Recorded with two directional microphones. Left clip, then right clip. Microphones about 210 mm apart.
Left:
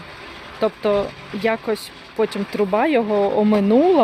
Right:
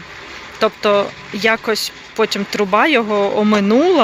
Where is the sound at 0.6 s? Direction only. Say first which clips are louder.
Right 5 dB; centre (ahead or behind).